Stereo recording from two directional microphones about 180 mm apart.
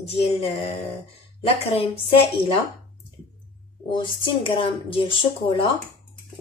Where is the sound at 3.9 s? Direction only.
30° left (ahead or behind).